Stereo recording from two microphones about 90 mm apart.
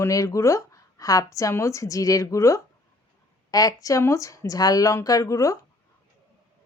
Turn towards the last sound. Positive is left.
turn(degrees=35)  # may be behind; listen again after turning